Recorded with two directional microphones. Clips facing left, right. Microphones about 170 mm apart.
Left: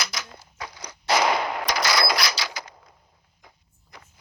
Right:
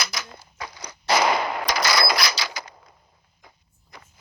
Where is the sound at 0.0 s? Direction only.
5° right (ahead or behind).